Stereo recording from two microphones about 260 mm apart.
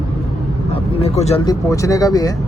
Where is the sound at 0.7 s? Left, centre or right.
Left.